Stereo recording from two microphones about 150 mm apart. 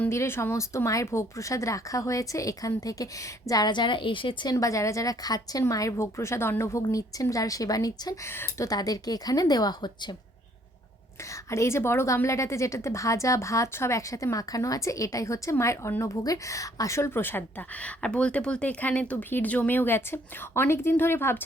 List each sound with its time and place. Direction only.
0.0 s a woman's voice: 15° left (ahead or behind); by 4.5 s 35° left (ahead or behind)
4.5 s a woman's voice: 20° left (ahead or behind)
11.5 s a woman's voice: 20° left (ahead or behind)